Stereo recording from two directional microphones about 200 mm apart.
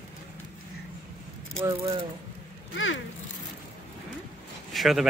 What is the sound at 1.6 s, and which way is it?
Speech, 20° right (ahead or behind).